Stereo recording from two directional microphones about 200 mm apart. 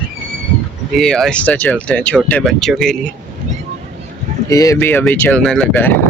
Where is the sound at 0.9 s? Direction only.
Centre (ahead or behind).